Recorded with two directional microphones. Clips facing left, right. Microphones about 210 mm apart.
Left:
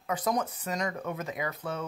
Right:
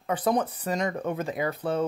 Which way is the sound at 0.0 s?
30° right (ahead or behind).